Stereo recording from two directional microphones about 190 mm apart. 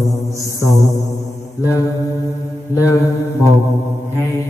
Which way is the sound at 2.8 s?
15° left (ahead or behind).